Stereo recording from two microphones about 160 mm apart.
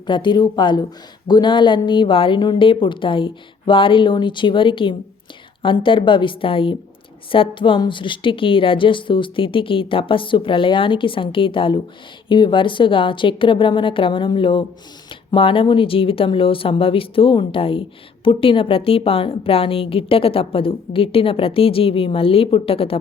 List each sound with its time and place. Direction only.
0.1 s a woman's voice: 30° left (ahead or behind)